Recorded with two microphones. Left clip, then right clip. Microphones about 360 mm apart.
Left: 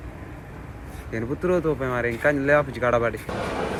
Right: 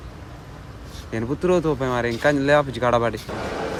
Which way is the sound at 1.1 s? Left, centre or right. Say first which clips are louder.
Right 3 dB; right.